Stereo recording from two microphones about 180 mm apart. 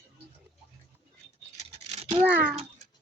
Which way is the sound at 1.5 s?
35° right (ahead or behind).